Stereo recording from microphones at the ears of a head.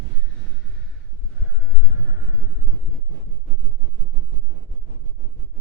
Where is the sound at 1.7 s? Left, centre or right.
Left.